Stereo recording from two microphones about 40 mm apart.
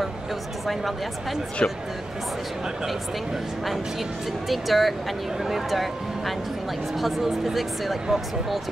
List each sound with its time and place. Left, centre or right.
0.7 s speech: centre
1.6 s speech: left
4.5 s speech: centre